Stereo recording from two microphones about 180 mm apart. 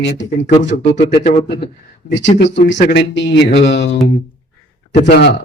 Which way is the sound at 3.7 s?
90° left.